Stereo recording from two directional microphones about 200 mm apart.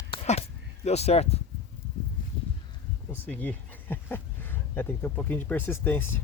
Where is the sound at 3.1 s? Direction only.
10° left (ahead or behind).